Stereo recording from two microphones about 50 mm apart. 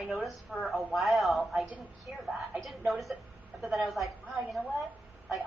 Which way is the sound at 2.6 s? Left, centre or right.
Centre.